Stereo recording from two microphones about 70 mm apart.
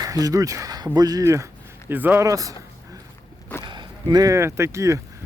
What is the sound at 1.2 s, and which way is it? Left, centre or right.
Speech, right.